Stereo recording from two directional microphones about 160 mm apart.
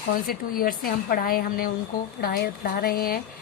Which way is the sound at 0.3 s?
65° left (ahead or behind).